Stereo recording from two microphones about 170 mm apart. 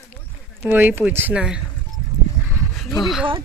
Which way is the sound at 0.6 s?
10° right (ahead or behind).